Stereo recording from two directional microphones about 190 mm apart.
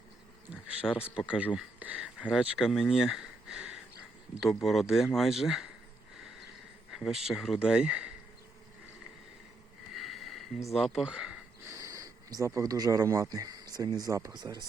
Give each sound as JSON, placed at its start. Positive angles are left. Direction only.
{"t": 0.5, "sound": "a sound", "side_deg": -5}
{"t": 1.1, "sound": "speech", "side_deg": -5}
{"t": 6.9, "sound": "speech", "side_deg": 0}
{"t": 9.9, "sound": "sniff", "side_deg": 0}
{"t": 10.7, "sound": "speech", "side_deg": 0}
{"t": 11.7, "sound": "speech", "side_deg": -20}